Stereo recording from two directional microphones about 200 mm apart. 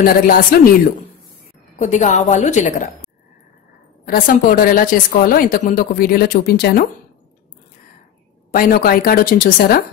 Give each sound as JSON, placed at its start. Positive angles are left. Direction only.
{"t": 0.0, "sound": "a woman's voice", "side_deg": 45}
{"t": 1.8, "sound": "a woman's voice", "side_deg": 35}
{"t": 4.0, "sound": "a woman's voice", "side_deg": 45}
{"t": 8.5, "sound": "a woman's voice", "side_deg": 45}